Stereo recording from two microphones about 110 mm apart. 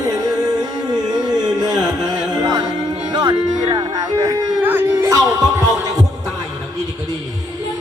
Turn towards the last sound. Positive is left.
turn(degrees=-35)  # may be behind; listen again after turning